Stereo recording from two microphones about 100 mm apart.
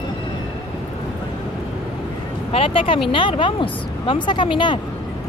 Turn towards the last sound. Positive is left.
turn(degrees=50)  # may be behind; listen again after turning